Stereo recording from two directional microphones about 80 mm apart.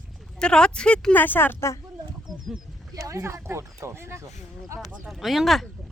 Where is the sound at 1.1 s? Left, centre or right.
Left.